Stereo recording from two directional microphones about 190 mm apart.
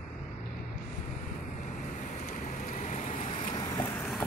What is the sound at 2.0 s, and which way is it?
Vehicle, 40° left (ahead or behind).